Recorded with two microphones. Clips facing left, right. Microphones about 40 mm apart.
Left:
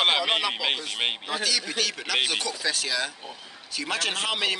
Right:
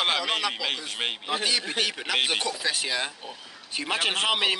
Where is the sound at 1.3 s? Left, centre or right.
Right.